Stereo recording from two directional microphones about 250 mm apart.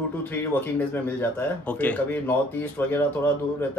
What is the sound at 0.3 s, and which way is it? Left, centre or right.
A man's voice, centre.